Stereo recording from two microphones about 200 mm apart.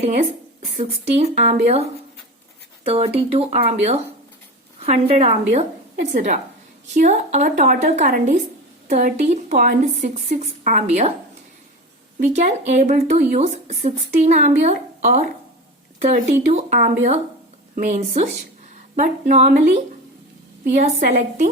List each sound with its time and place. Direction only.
0.0 s a woman's voice: 35° right (ahead or behind)
12.2 s speech: 35° right (ahead or behind)
20.8 s speech: 40° right (ahead or behind)